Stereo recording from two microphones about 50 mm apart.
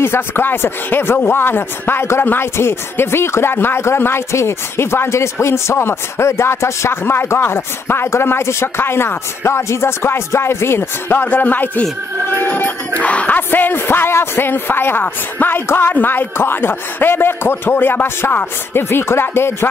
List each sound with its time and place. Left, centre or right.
0.0 s speech: left
2.5 s speech: left
7.1 s speech: left
11.2 s speech: left
13.0 s speech: left
13.5 s speech: left